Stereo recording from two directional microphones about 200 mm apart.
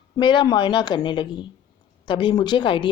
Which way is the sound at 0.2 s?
25° left (ahead or behind).